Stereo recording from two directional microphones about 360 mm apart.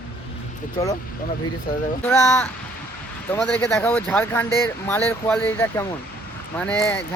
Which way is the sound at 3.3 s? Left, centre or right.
Centre.